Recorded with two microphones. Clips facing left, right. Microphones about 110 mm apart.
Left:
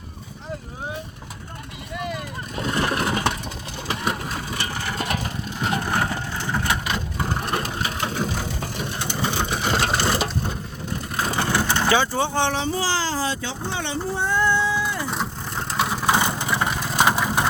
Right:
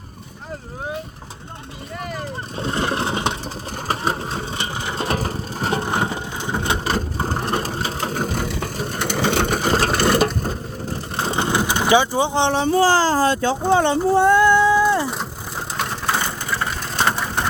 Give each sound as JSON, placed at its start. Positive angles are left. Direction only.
{"t": 2.6, "sound": "vehicle", "side_deg": -30}
{"t": 5.0, "sound": "vehicle", "side_deg": -40}
{"t": 5.8, "sound": "crushing", "side_deg": -20}
{"t": 6.8, "sound": "vehicle", "side_deg": -35}
{"t": 9.0, "sound": "vehicle", "side_deg": -75}
{"t": 9.6, "sound": "vehicle", "side_deg": -40}
{"t": 11.2, "sound": "vehicle", "side_deg": -25}
{"t": 12.6, "sound": "speech", "side_deg": -50}
{"t": 14.1, "sound": "a sound", "side_deg": -70}
{"t": 15.1, "sound": "vehicle", "side_deg": 0}
{"t": 16.0, "sound": "vehicle", "side_deg": 15}